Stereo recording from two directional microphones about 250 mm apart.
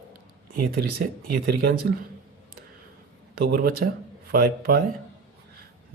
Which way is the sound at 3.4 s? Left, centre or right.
Right.